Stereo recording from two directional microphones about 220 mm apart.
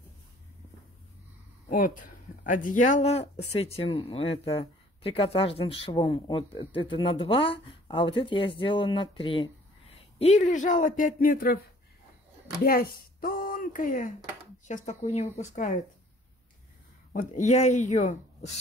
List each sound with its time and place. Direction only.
1.7 s a man's voice: 35° left (ahead or behind)
12.6 s a man's voice: 40° left (ahead or behind)
17.1 s a man's voice: 35° left (ahead or behind)